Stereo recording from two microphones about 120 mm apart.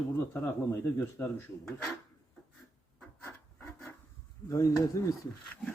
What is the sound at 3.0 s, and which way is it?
Rub, 15° left (ahead or behind).